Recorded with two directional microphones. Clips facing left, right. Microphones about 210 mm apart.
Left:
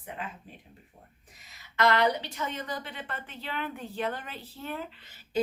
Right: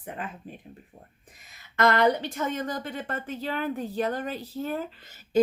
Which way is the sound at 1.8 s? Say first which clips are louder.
Right 3 dB; 50° right (ahead or behind).